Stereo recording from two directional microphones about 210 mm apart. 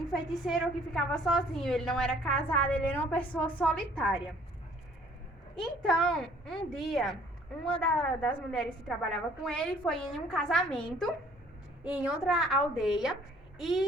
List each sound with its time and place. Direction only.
0.1 s a woman's voice: centre (ahead or behind)
5.5 s a woman's voice: 5° left (ahead or behind)
11.8 s a woman's voice: 5° right (ahead or behind)